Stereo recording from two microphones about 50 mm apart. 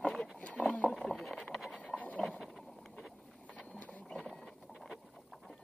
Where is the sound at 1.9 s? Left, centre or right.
Left.